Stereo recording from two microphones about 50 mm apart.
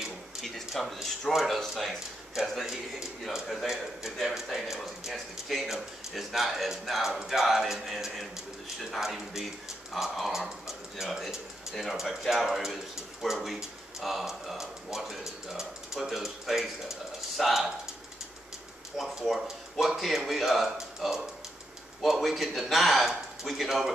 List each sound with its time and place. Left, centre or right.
0.8 s speech: centre
2.6 s a man's voice: centre
18.9 s speech: centre